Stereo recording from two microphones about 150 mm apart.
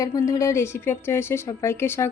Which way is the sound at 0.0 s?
20° left (ahead or behind).